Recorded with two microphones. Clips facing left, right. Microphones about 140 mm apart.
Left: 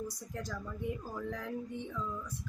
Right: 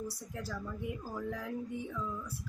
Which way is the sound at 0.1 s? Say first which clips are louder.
Even; 5° right (ahead or behind).